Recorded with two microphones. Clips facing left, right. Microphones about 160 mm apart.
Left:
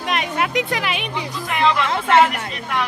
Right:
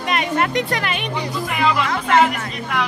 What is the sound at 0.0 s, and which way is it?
Speech, centre (ahead or behind).